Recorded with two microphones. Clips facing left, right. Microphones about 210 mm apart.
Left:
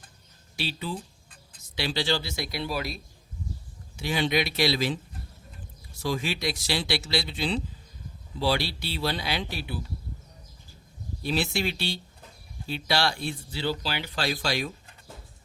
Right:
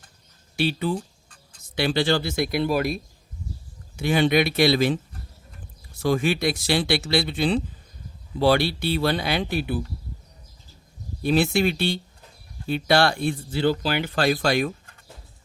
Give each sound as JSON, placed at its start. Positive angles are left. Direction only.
{"t": 0.5, "sound": "speech", "side_deg": -55}
{"t": 6.0, "sound": "speech", "side_deg": -55}
{"t": 11.2, "sound": "speech", "side_deg": -55}